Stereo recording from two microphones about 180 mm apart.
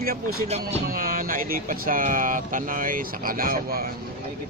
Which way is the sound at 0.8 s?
50° right (ahead or behind).